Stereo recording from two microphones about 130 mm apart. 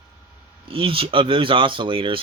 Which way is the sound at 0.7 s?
45° right (ahead or behind).